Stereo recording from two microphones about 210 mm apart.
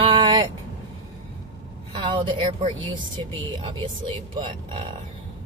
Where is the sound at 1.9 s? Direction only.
20° right (ahead or behind).